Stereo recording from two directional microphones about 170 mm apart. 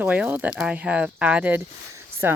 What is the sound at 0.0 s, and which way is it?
Speech, 10° right (ahead or behind).